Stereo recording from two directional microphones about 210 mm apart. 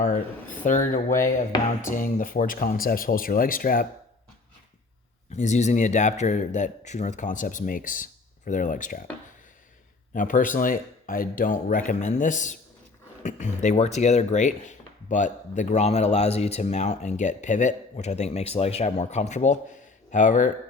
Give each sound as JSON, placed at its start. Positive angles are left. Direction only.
{"t": 0.0, "sound": "speech", "side_deg": 40}
{"t": 5.3, "sound": "speech", "side_deg": 35}
{"t": 10.2, "sound": "speech", "side_deg": 40}